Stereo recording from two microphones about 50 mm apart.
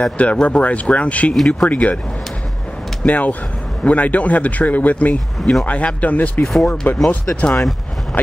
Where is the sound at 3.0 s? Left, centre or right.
Left.